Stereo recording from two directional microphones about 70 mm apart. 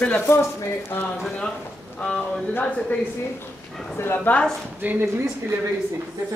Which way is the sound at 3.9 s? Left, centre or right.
Left.